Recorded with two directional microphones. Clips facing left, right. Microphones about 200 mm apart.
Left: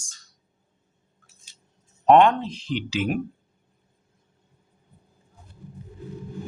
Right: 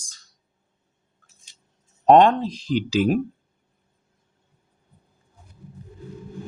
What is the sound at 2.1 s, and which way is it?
Speech, 35° right (ahead or behind).